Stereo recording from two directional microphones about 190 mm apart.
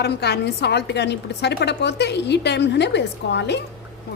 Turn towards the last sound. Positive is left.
turn(degrees=65)  # may be behind; listen again after turning